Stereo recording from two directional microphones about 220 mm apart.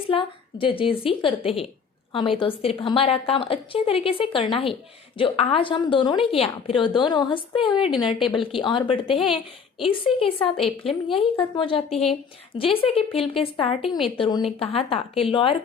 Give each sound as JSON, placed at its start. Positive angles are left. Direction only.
{"t": 0.1, "sound": "a woman's voice", "side_deg": 25}
{"t": 7.8, "sound": "a woman's voice", "side_deg": 0}
{"t": 8.4, "sound": "a woman's voice", "side_deg": 25}
{"t": 9.2, "sound": "a woman's voice", "side_deg": 0}
{"t": 9.9, "sound": "a woman's voice", "side_deg": 25}
{"t": 10.3, "sound": "a woman's voice", "side_deg": 0}
{"t": 11.3, "sound": "a woman's voice", "side_deg": 25}